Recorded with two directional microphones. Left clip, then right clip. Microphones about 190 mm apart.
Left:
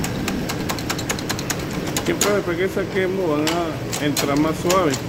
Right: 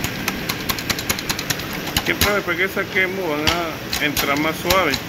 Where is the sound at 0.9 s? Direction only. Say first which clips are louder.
Right 2 dB; 45° left (ahead or behind).